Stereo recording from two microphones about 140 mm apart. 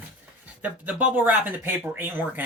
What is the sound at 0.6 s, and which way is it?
Speech, 10° right (ahead or behind).